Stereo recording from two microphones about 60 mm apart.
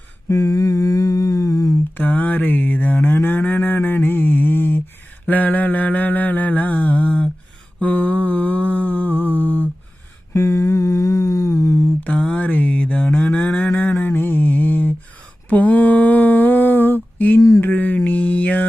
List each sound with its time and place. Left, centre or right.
0.3 s humming: left
2.0 s cattle: left
5.3 s mantra: left
7.8 s humming: left
10.3 s a sound: left
12.4 s mantra: left
13.1 s cattle: left
14.0 s mantra: left
15.4 s a sound: left
17.6 s mantra: left